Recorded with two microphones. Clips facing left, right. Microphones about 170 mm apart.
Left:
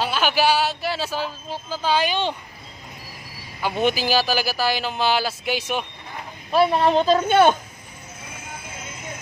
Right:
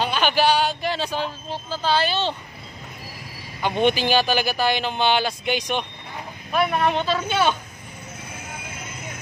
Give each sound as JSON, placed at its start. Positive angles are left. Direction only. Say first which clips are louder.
{"t": 0.0, "sound": "a man's voice", "louder": "even", "side_deg": 5}
{"t": 3.6, "sound": "speech", "louder": "right 1 dB", "side_deg": 5}
{"t": 6.5, "sound": "speech", "louder": "left 4 dB", "side_deg": 30}